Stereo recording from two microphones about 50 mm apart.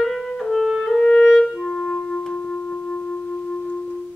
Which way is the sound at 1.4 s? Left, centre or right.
Centre.